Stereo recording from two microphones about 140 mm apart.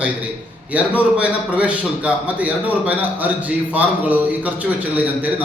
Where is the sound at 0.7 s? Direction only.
10° right (ahead or behind).